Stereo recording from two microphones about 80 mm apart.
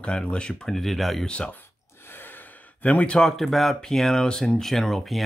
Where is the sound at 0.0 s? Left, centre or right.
Centre.